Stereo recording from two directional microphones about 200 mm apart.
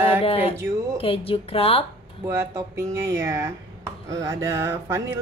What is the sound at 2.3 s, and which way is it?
Speech, 15° right (ahead or behind).